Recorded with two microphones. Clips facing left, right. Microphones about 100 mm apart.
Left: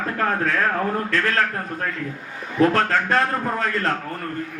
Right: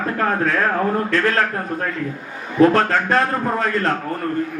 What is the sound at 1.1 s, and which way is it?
A man's voice, 20° right (ahead or behind).